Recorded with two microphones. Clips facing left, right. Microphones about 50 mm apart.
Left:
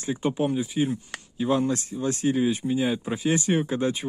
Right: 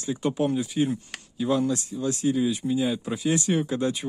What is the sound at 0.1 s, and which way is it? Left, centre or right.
Speech, centre.